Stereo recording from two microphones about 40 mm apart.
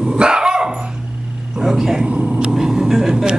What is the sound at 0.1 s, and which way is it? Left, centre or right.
Dog, right.